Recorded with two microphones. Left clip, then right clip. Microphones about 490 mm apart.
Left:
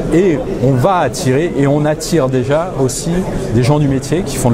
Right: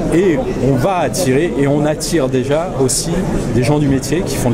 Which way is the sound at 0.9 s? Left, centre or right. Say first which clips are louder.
Left 2 dB; left.